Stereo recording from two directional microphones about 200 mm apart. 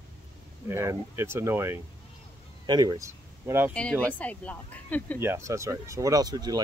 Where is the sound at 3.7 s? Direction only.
5° left (ahead or behind).